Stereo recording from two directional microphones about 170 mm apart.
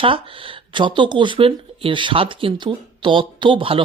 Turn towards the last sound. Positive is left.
turn(degrees=-30)  # may be behind; listen again after turning